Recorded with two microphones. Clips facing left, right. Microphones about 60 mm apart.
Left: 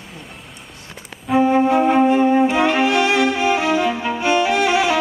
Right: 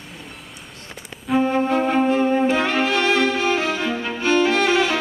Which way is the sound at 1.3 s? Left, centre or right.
Centre.